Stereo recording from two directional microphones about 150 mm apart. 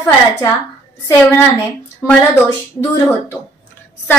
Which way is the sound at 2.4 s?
25° left (ahead or behind).